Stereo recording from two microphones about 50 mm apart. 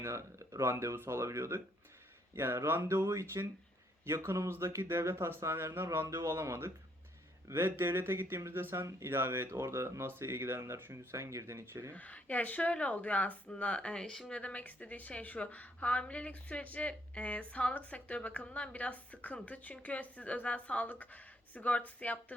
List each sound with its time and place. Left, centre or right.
0.0 s speech: right
2.3 s speech: right
6.1 s speech: right
11.1 s speech: right
11.9 s a woman's voice: left; by 14.3 s centre
14.3 s a woman's voice: left